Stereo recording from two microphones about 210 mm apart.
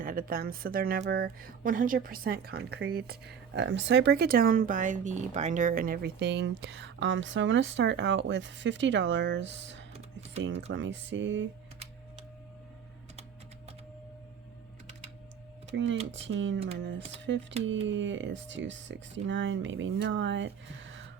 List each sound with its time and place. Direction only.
0.0 s speech: 40° right (ahead or behind); by 9.8 s 60° right (ahead or behind)
9.9 s a sound: 30° right (ahead or behind)
10.7 s speech: 60° right (ahead or behind)
15.7 s speech: 60° right (ahead or behind)